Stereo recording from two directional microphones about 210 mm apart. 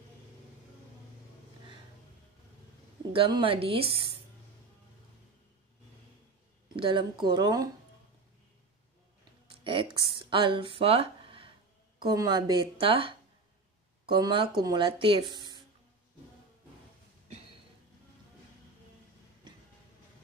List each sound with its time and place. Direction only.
3.1 s speech: 25° right (ahead or behind)
6.8 s speech: 25° right (ahead or behind)
9.6 s speech: 25° right (ahead or behind)